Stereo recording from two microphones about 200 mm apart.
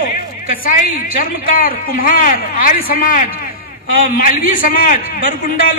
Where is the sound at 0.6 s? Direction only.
45° left (ahead or behind).